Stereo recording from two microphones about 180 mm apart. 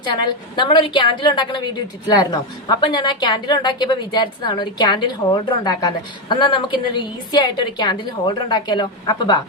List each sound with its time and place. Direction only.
0.0 s a woman's voice: 25° left (ahead or behind)